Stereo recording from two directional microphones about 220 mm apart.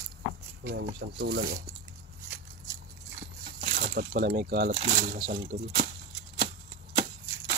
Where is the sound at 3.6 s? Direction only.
40° right (ahead or behind).